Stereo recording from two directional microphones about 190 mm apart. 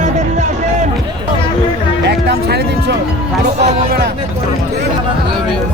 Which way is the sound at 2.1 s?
60° right (ahead or behind).